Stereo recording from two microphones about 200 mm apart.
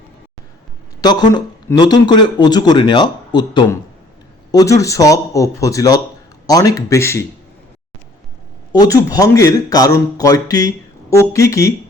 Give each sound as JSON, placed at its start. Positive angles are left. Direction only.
{"t": 1.0, "sound": "a man's voice", "side_deg": 20}
{"t": 8.7, "sound": "speech", "side_deg": 20}